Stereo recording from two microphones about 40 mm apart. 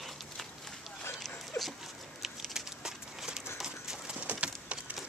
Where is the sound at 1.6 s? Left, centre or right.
Centre.